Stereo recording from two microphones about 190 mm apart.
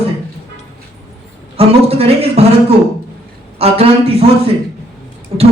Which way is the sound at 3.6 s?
30° right (ahead or behind).